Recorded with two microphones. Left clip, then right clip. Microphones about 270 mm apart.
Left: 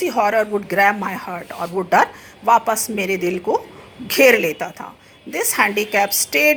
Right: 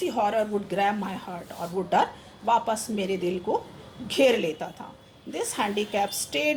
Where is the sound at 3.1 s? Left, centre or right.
Centre.